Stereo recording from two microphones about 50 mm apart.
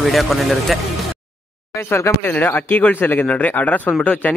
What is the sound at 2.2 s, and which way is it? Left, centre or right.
Speech, left.